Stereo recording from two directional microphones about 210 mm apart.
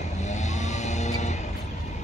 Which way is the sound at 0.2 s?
35° left (ahead or behind).